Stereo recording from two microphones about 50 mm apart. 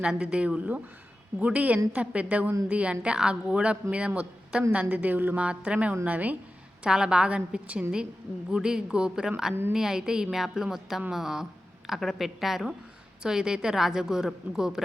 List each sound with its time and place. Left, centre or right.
0.0 s a woman's voice: centre; by 5.4 s right
5.4 s a woman's voice: right
6.8 s a woman's voice: centre